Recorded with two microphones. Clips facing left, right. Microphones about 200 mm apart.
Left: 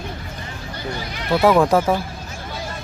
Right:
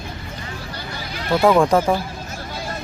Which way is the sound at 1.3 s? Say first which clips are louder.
Even; 5° left (ahead or behind).